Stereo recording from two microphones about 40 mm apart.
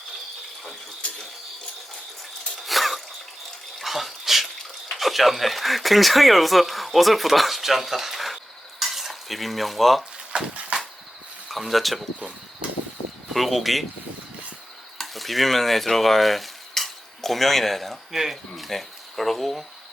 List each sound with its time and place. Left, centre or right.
2.6 s a sound: centre
3.8 s bathtub: centre
4.9 s speech: centre
8.8 s stir: centre
10.3 s a sound: right
11.4 s speech: centre
13.3 s speech: centre
14.9 s speech: centre